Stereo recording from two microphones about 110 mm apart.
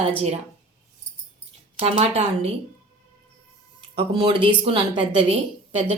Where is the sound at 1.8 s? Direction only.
70° right (ahead or behind).